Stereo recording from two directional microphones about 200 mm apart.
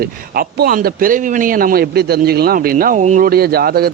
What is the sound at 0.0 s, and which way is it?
Speech, 45° right (ahead or behind).